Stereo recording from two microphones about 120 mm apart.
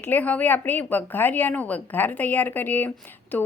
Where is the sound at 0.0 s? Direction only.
15° left (ahead or behind).